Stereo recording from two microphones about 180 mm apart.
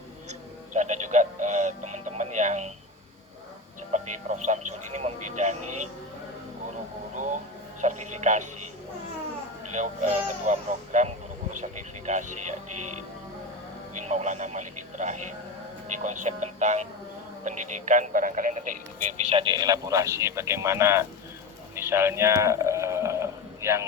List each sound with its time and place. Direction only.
0.3 s music: 40° right (ahead or behind)
3.9 s speech: 40° right (ahead or behind)
7.8 s speech: 40° right (ahead or behind)
9.7 s speech: 45° right (ahead or behind)
14.0 s speech: 40° right (ahead or behind)
19.4 s a man's voice: 25° right (ahead or behind)
21.8 s a sound: 15° right (ahead or behind)